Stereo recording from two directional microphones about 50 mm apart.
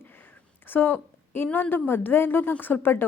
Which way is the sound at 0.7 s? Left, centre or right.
Left.